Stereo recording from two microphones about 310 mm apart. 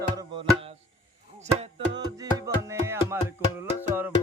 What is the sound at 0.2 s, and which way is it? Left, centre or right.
Music, centre.